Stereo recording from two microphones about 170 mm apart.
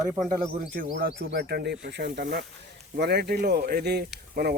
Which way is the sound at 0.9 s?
60° right (ahead or behind).